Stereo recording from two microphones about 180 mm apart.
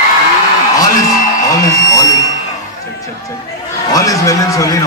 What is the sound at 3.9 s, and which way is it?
Speech, 20° left (ahead or behind).